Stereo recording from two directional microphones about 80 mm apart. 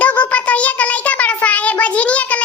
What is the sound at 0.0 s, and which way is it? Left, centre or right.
Child singing, centre.